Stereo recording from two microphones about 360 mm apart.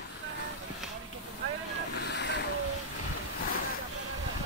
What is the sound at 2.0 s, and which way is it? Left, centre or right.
Boat, left.